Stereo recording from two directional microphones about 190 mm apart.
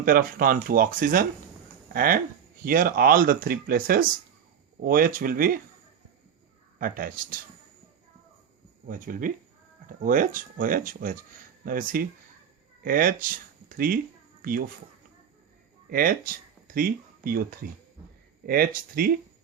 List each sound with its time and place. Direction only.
0.0 s speech: 50° right (ahead or behind)
6.7 s speech: 50° right (ahead or behind)
8.9 s speech: 45° right (ahead or behind)
15.9 s speech: 50° right (ahead or behind)